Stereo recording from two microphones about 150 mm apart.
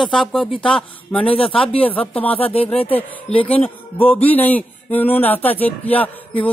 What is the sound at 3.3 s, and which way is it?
Speech, 40° left (ahead or behind).